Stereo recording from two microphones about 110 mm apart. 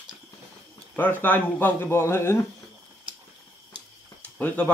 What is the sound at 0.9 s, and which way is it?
Speech, 15° left (ahead or behind).